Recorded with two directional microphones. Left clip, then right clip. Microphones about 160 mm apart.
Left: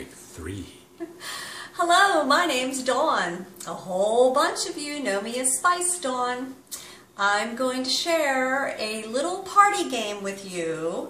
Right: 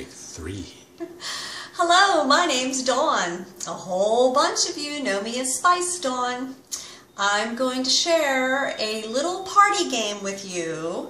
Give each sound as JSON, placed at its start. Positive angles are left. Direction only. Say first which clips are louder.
{"t": 0.4, "sound": "a woman's voice", "louder": "even", "side_deg": 0}